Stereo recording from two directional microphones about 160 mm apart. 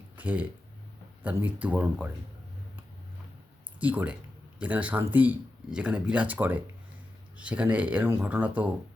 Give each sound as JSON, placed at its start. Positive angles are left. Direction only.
{"t": 0.2, "sound": "speech", "side_deg": -10}
{"t": 3.8, "sound": "speech", "side_deg": -10}